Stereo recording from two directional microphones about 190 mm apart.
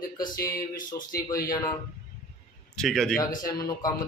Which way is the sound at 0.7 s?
45° left (ahead or behind).